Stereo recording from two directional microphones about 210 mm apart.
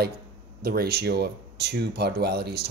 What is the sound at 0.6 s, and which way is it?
Speech, 45° right (ahead or behind).